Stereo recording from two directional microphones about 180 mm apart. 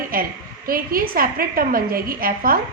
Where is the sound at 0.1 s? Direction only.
55° right (ahead or behind).